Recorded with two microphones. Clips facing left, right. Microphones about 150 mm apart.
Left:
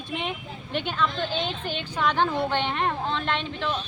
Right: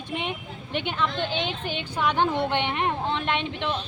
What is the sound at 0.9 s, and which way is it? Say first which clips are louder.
A woman's voice: even; 15° right (ahead or behind).